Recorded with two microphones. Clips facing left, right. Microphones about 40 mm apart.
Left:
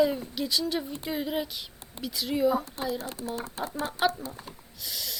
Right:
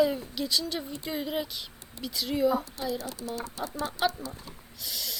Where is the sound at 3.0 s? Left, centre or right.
Left.